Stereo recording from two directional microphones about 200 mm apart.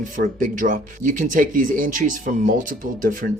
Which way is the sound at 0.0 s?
40° right (ahead or behind).